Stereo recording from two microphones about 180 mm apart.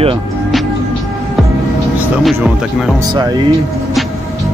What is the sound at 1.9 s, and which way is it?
Speech, 5° right (ahead or behind).